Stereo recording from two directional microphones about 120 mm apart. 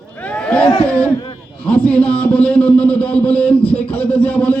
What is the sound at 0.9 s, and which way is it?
A man's voice, 10° left (ahead or behind).